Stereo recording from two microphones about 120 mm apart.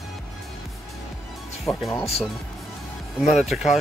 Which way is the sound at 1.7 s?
10° left (ahead or behind).